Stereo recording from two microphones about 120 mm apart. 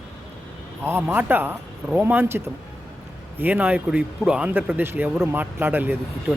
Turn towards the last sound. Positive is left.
turn(degrees=-15)  # may be behind; listen again after turning